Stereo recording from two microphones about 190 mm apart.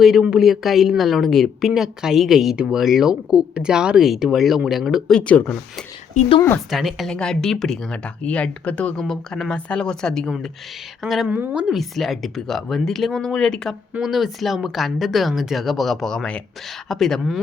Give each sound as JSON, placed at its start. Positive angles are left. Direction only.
{"t": 0.0, "sound": "speech", "side_deg": -5}
{"t": 6.1, "sound": "speech", "side_deg": 30}
{"t": 6.7, "sound": "speech", "side_deg": 0}